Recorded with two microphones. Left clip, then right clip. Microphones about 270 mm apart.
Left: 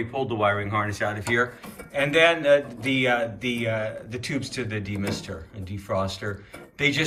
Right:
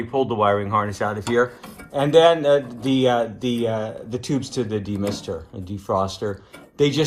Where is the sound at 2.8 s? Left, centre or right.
Centre.